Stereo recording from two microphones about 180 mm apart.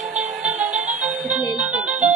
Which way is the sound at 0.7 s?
40° right (ahead or behind).